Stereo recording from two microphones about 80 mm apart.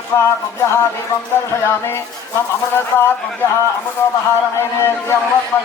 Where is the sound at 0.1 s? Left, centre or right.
Left.